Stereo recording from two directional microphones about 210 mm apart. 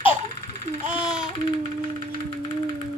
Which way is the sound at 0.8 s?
5° right (ahead or behind).